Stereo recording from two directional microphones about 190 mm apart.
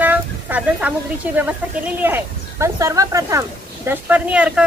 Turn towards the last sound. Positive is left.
turn(degrees=-5)  # may be behind; listen again after turning